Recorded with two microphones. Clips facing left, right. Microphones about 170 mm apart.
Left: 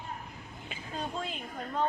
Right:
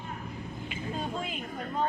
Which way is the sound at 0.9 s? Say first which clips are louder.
Right 1 dB; 5° right (ahead or behind).